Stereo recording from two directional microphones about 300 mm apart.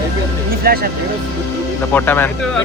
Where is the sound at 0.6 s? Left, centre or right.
Right.